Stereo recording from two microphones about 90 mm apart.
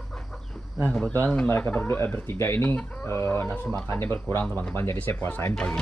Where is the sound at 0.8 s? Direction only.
10° left (ahead or behind).